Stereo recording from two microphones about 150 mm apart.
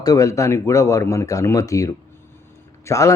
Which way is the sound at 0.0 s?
20° left (ahead or behind).